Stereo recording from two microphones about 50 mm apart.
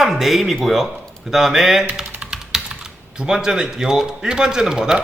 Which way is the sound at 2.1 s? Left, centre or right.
Right.